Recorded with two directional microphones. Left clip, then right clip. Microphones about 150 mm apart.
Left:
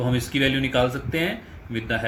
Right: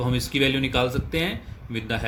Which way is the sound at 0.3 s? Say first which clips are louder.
Left 1 dB; 90° right.